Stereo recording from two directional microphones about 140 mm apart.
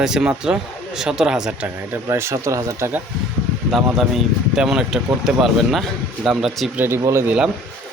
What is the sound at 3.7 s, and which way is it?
Speech, centre (ahead or behind).